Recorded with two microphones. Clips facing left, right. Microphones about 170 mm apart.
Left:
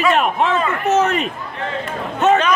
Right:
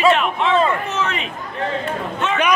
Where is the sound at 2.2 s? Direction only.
40° left (ahead or behind).